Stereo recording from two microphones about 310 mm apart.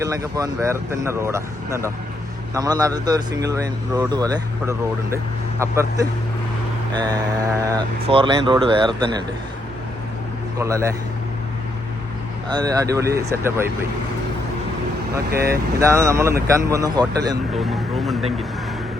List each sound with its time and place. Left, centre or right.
0.0 s speech: centre
7.6 s speech: centre
10.6 s speech: centre
12.5 s speech: centre
15.3 s speech: right
15.8 s speech: centre
17.5 s vehicle: centre